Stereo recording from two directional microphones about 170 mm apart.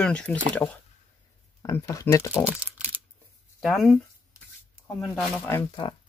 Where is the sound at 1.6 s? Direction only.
20° left (ahead or behind).